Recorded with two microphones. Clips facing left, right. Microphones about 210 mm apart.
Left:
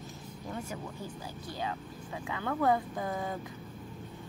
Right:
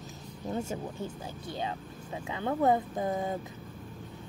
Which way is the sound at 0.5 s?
25° right (ahead or behind).